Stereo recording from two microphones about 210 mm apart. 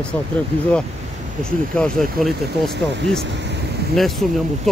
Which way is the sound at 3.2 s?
55° right (ahead or behind).